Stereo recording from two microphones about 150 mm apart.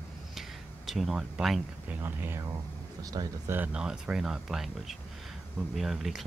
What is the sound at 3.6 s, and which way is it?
Speech, 5° right (ahead or behind).